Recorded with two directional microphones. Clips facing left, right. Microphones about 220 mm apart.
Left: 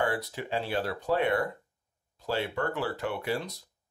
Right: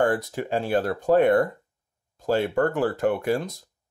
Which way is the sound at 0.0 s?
45° right (ahead or behind).